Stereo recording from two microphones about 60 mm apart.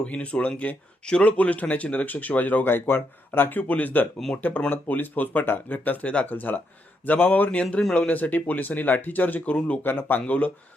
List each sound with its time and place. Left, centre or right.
0.0 s speech: centre
9.6 s speech: centre
9.8 s speech: left